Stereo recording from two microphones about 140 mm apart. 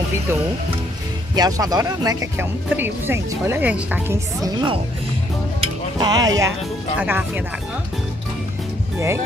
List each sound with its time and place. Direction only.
1.3 s speech: 30° right (ahead or behind); by 4.2 s 10° right (ahead or behind)
4.4 s speech: 30° right (ahead or behind)
5.9 s speech: 30° right (ahead or behind)
7.0 s speech: 15° right (ahead or behind)